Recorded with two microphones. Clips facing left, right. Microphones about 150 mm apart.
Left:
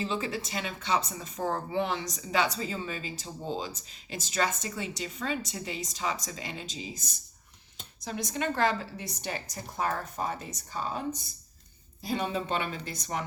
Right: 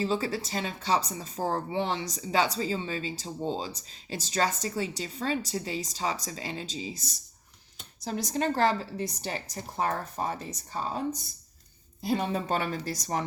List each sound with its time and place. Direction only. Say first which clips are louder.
0.0 s speech: right 3 dB; 35° right (ahead or behind)
12.1 s speech: right 2 dB; 40° right (ahead or behind)